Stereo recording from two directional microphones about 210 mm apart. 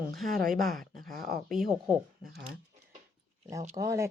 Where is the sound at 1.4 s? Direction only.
Centre (ahead or behind).